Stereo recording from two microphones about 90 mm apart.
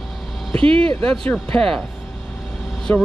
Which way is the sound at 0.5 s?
90° right.